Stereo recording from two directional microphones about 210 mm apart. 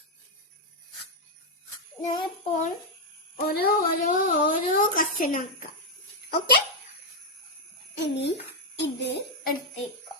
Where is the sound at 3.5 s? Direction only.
45° left (ahead or behind).